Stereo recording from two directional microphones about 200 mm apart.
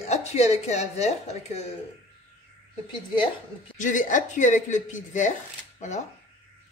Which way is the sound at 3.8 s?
40° left (ahead or behind).